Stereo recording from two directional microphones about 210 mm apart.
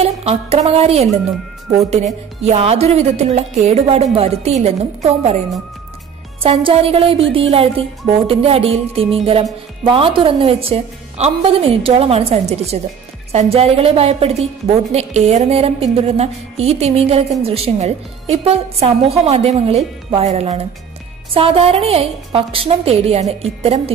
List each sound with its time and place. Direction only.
0.0 s speech: 30° right (ahead or behind)
2.4 s a woman's voice: 30° right (ahead or behind)
6.4 s a woman's voice: 25° right (ahead or behind)